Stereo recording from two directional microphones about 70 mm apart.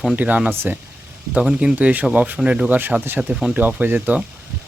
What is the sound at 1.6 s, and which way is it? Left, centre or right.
Speech, right.